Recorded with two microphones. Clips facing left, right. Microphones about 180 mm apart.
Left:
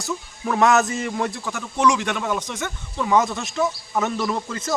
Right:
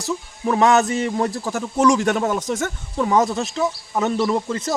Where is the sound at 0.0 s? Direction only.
30° right (ahead or behind).